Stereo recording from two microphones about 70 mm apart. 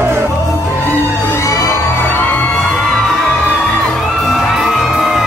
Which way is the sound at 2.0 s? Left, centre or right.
Left.